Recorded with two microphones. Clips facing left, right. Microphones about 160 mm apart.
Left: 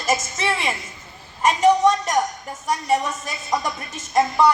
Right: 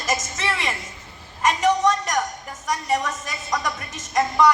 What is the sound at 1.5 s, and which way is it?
A woman's voice, 30° left (ahead or behind).